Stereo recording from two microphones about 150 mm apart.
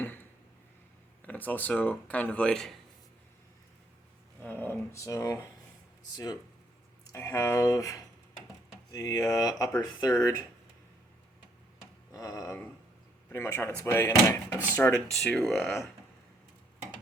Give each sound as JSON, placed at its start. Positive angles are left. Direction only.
{"t": 1.2, "sound": "speech", "side_deg": 10}
{"t": 4.4, "sound": "speech", "side_deg": 15}
{"t": 12.1, "sound": "a sound", "side_deg": 25}
{"t": 13.3, "sound": "speech", "side_deg": 15}